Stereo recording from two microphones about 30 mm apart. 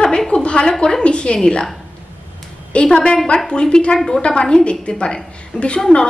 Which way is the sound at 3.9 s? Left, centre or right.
Centre.